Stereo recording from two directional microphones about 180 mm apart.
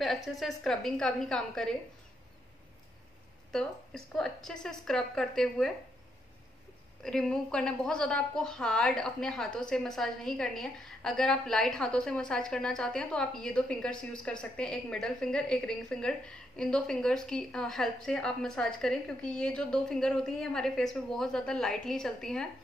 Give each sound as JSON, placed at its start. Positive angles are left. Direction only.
{"t": 0.0, "sound": "a woman's voice", "side_deg": 0}
{"t": 3.5, "sound": "a woman's voice", "side_deg": 5}
{"t": 7.0, "sound": "a woman's voice", "side_deg": 5}